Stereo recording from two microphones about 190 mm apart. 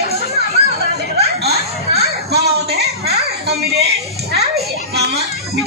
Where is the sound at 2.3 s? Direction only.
60° right (ahead or behind).